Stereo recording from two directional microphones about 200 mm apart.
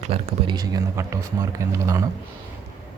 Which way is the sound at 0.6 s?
15° right (ahead or behind).